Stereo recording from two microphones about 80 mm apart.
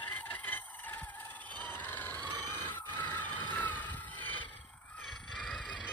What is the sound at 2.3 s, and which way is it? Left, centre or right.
Grunt, left.